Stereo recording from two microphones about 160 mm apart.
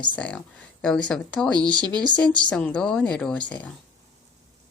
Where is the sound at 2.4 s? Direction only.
5° left (ahead or behind).